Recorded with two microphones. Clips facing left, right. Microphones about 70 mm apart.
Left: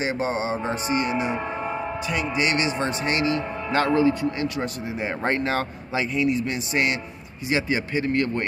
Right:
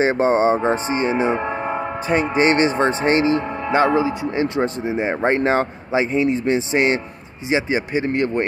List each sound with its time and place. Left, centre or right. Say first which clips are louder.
0.0 s speech: right 9 dB; right
1.4 s speech: right 5 dB; right
3.7 s speech: right 3 dB; centre